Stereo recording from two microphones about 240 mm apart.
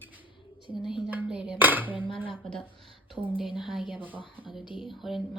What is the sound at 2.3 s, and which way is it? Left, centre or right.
Speech, centre.